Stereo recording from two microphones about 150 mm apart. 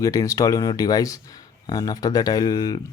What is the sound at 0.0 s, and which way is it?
Speech, 20° left (ahead or behind).